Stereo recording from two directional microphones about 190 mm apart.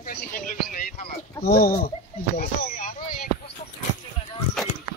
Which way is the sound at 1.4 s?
55° left (ahead or behind).